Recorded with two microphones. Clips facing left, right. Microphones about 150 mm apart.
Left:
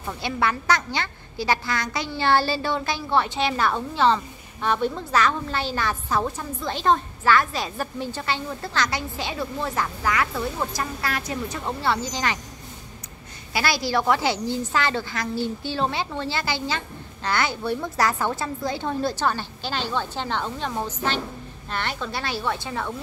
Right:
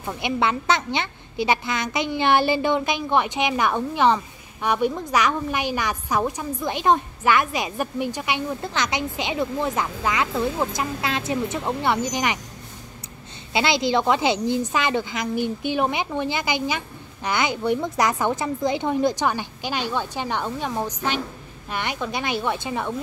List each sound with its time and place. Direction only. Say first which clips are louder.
0.0 s a woman's voice: right 2 dB; 20° right (ahead or behind)
13.5 s a woman's voice: right 3 dB; 20° right (ahead or behind)